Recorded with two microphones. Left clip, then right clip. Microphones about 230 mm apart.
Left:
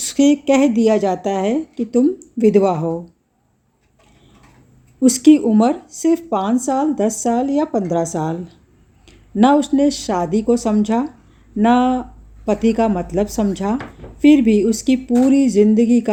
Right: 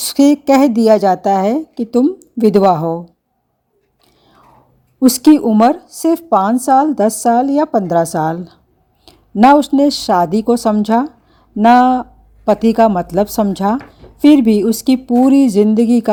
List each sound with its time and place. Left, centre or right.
0.0 s speech: right
4.9 s speech: right